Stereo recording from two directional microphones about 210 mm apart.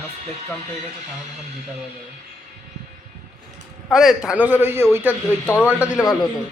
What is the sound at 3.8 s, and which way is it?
A man's voice, centre (ahead or behind).